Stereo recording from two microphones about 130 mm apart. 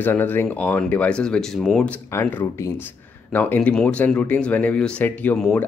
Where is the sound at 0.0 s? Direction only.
15° left (ahead or behind).